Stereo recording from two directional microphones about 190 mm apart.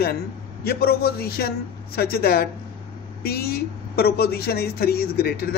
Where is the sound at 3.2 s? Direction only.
55° left (ahead or behind).